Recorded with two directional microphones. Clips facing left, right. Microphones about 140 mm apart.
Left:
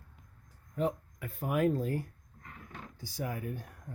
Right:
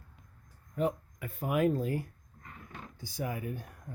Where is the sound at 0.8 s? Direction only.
10° right (ahead or behind).